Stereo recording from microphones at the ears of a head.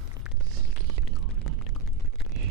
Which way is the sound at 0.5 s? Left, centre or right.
Right.